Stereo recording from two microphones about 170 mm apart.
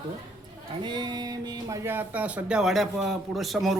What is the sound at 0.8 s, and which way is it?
Speech, 25° right (ahead or behind).